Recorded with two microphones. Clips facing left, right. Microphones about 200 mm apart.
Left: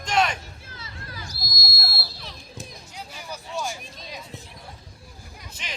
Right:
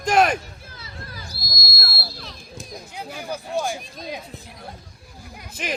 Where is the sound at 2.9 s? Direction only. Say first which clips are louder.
Right 8 dB; 55° right (ahead or behind).